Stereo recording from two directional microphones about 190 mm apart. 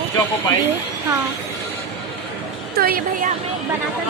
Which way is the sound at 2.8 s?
50° right (ahead or behind).